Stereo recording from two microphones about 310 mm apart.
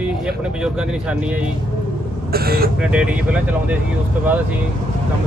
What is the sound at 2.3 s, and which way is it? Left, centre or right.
Speech, right.